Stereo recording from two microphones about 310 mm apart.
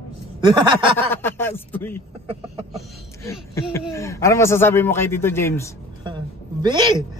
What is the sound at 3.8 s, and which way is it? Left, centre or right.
A man's voice, centre.